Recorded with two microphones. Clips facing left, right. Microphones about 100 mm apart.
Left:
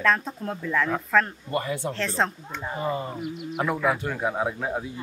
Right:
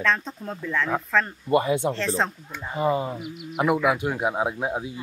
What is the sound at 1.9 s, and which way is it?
Speech, centre (ahead or behind).